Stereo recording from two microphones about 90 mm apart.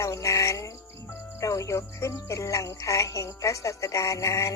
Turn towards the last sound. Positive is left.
turn(degrees=35)  # may be behind; listen again after turning